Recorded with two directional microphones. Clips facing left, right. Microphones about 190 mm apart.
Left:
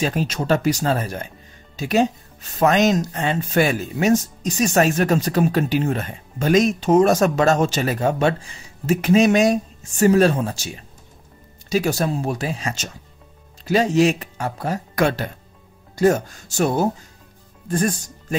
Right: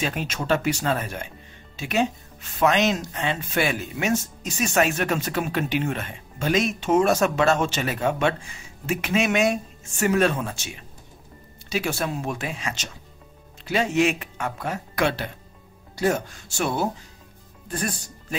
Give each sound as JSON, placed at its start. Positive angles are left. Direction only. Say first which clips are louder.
{"t": 0.0, "sound": "speech", "louder": "left 5 dB", "side_deg": 35}